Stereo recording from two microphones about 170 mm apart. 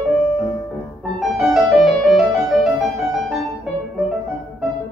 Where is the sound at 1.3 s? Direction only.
Centre (ahead or behind).